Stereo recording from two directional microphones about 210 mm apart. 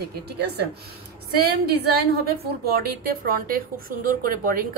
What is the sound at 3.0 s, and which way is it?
A woman's voice, 45° right (ahead or behind).